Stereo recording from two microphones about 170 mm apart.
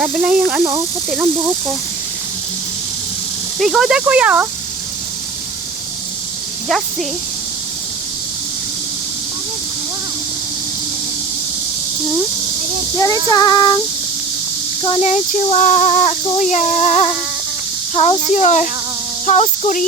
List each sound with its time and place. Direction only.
0.0 s speech: 10° right (ahead or behind)
3.6 s speech: 5° right (ahead or behind)
6.7 s speech: centre (ahead or behind)
13.3 s child singing: 25° left (ahead or behind)
14.8 s child singing: 35° left (ahead or behind)
17.9 s speech: 35° left (ahead or behind)